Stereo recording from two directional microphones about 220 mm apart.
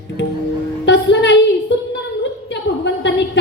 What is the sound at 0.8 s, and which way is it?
Music, 55° left (ahead or behind).